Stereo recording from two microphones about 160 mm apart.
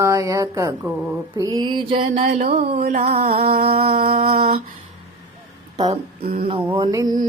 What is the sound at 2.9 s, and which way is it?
Mantra, 40° right (ahead or behind).